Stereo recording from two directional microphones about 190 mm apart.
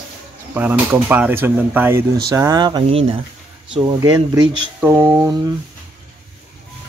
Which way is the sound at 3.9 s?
15° right (ahead or behind).